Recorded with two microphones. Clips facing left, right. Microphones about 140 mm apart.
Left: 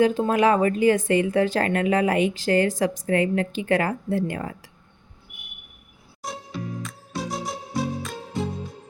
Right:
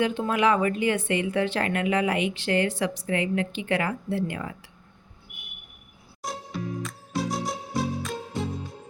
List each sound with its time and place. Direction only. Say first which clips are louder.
0.0 s a woman's voice: left 4 dB; 40° left (ahead or behind)
6.2 s music: even; centre (ahead or behind)